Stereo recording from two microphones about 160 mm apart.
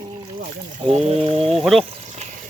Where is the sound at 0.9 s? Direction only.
40° right (ahead or behind).